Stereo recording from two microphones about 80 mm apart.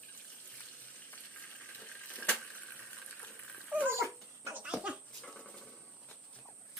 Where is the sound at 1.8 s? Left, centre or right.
Centre.